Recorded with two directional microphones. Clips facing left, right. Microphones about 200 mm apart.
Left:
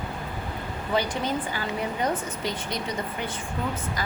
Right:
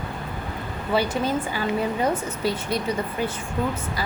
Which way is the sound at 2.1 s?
5° right (ahead or behind).